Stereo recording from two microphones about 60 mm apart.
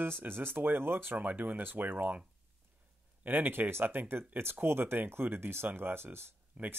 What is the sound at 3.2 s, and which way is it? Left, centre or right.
A man's voice, right.